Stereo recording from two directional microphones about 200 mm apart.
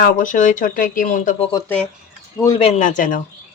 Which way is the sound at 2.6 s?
35° left (ahead or behind).